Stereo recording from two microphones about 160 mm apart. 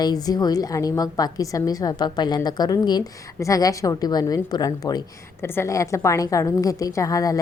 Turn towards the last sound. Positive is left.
turn(degrees=20)  # may be behind; listen again after turning